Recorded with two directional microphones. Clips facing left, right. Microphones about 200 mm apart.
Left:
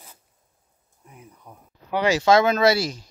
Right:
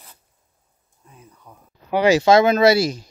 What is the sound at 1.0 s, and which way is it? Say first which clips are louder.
Speech: left 1 dB; 15° left (ahead or behind).